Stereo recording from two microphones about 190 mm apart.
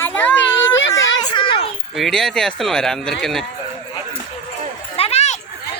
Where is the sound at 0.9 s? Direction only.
25° left (ahead or behind).